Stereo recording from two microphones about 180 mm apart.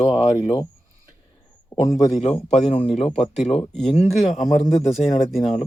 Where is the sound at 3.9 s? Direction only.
35° left (ahead or behind).